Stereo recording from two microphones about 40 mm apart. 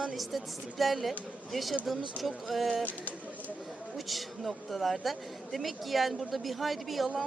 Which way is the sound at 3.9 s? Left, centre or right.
Centre.